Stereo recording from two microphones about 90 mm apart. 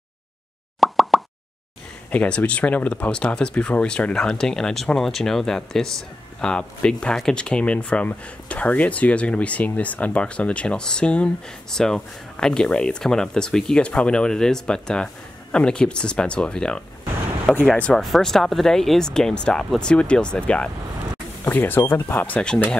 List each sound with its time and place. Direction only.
0.7 s plop: centre (ahead or behind)
2.0 s speech: 15° left (ahead or behind)